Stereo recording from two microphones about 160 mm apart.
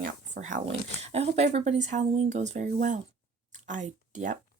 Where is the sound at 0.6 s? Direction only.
40° right (ahead or behind).